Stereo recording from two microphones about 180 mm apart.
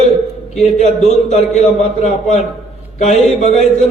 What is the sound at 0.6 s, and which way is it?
A man's voice, 40° left (ahead or behind).